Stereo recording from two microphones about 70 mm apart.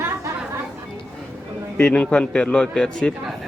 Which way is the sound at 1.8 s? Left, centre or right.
Centre.